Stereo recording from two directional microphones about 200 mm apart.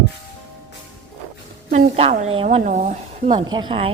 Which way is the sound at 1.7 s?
40° right (ahead or behind).